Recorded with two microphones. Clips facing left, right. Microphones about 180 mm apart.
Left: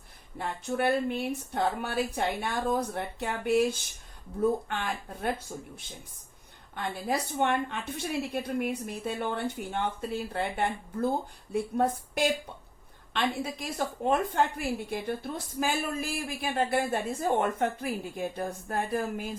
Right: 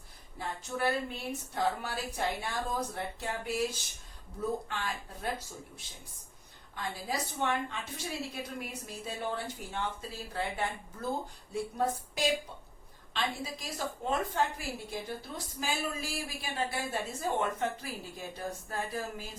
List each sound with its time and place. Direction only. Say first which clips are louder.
0.3 s a woman's voice: left 5 dB; 60° left (ahead or behind)